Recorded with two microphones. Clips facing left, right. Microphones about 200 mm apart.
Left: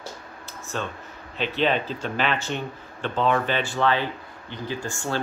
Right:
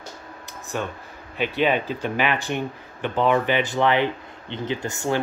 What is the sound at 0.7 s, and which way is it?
Speech, 15° right (ahead or behind).